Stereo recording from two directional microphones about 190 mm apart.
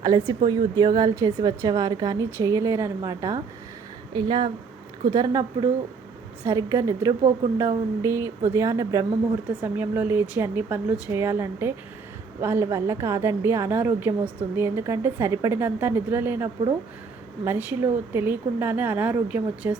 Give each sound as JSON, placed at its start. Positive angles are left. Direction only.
{"t": 0.0, "sound": "a woman's voice", "side_deg": -20}